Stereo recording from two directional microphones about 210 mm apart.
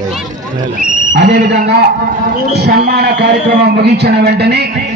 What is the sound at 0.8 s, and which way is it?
A man's voice, 40° right (ahead or behind).